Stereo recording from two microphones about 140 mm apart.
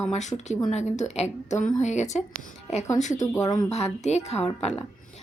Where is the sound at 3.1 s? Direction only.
25° left (ahead or behind).